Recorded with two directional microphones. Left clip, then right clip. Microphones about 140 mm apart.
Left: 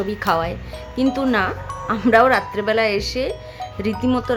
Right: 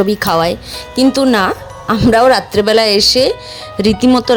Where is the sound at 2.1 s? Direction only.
45° right (ahead or behind).